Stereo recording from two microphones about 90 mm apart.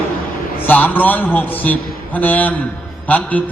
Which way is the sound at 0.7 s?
20° left (ahead or behind).